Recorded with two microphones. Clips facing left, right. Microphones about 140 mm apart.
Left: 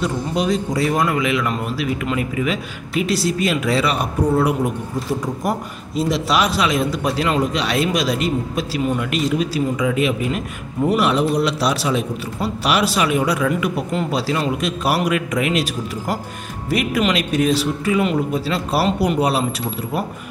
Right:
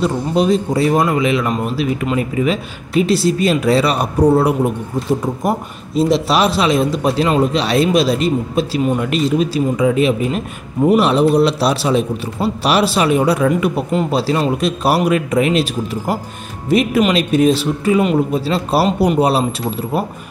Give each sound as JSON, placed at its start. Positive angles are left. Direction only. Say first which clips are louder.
{"t": 0.0, "sound": "a man's voice", "louder": "right 5 dB", "side_deg": -30}